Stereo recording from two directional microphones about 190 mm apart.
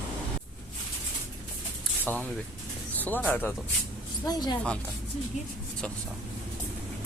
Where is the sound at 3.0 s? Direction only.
10° left (ahead or behind).